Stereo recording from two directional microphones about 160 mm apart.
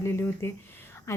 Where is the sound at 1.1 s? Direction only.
20° left (ahead or behind).